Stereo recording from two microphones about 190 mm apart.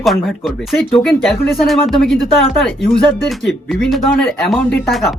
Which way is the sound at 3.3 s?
Centre (ahead or behind).